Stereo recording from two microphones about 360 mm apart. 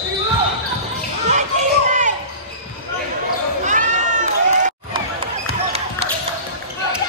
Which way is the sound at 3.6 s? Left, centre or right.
Right.